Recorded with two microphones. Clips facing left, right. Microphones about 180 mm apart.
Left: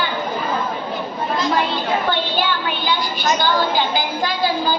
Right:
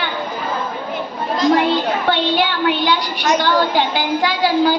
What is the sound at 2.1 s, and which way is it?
A woman's voice, 70° right (ahead or behind).